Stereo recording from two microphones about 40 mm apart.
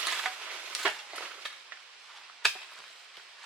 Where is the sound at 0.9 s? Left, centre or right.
Right.